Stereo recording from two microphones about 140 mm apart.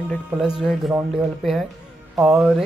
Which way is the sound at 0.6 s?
5° right (ahead or behind).